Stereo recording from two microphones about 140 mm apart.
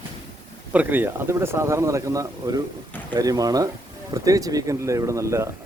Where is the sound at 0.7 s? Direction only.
15° right (ahead or behind).